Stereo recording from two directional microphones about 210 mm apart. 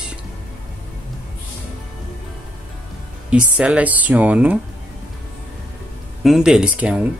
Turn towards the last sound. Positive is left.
turn(degrees=-5)  # may be behind; listen again after turning